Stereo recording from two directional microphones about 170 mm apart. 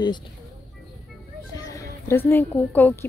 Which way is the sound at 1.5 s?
15° left (ahead or behind).